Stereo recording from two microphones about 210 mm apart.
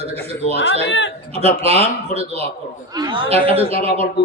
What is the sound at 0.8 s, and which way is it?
Speech, 60° left (ahead or behind).